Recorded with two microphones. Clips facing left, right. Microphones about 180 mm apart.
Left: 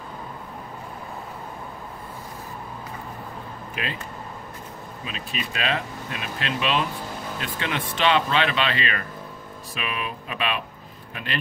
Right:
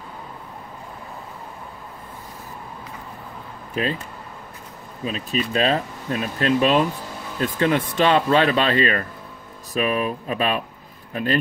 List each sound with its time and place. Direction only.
3.7 s speech: 35° right (ahead or behind)
5.0 s speech: 35° right (ahead or behind)